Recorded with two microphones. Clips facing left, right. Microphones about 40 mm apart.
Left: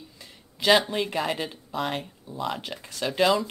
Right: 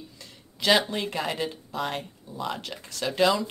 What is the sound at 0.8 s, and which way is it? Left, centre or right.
Speech, centre.